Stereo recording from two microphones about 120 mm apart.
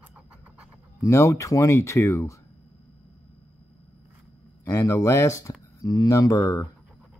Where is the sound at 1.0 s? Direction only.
25° left (ahead or behind).